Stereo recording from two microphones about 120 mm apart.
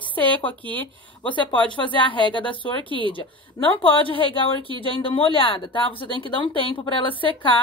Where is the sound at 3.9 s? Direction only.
45° left (ahead or behind).